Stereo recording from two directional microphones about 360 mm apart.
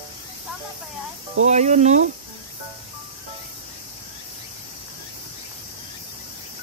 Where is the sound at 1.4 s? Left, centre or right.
Centre.